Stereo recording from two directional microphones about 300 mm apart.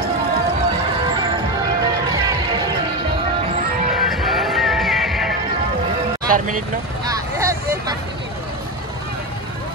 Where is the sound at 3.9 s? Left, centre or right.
Centre.